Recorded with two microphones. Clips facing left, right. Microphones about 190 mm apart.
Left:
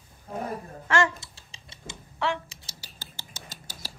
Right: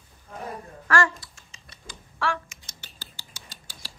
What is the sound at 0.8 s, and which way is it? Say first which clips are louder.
Computer keyboard: right 1 dB; 25° left (ahead or behind).